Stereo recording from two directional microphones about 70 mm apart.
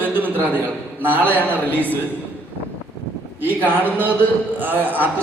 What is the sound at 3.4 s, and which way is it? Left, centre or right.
A man's voice, right.